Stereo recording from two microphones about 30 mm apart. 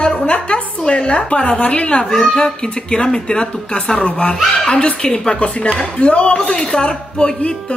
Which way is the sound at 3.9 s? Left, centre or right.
Left.